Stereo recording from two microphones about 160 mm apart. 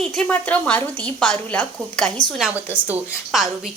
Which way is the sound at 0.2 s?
10° left (ahead or behind).